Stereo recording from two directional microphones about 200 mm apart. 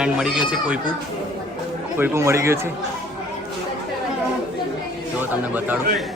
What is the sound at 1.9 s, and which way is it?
Speech, 10° right (ahead or behind).